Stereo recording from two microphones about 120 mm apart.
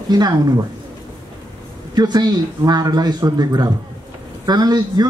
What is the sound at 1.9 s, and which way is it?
Speech, 35° right (ahead or behind).